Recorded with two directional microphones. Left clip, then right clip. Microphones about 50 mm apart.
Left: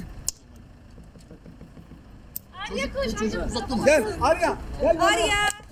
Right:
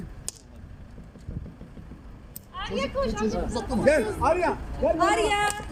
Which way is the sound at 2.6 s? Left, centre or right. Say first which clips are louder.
Even; centre.